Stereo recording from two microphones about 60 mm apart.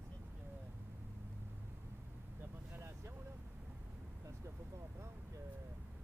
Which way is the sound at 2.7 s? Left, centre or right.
Right.